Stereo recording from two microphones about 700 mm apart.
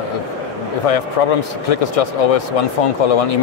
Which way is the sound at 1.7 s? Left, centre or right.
Left.